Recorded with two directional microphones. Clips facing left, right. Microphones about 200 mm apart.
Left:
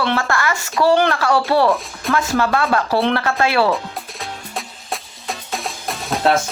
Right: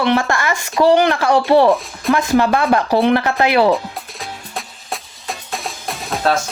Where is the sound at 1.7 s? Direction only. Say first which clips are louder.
Right 4 dB; centre (ahead or behind).